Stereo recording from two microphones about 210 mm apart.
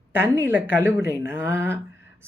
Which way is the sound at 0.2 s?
10° right (ahead or behind).